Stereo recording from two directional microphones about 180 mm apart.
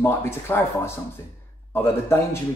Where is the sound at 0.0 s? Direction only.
15° left (ahead or behind).